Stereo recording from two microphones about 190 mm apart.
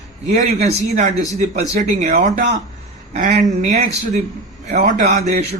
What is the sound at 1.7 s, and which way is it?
A man's voice, 40° right (ahead or behind).